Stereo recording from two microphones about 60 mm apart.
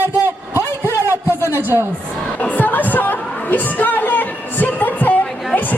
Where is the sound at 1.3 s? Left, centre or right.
Right.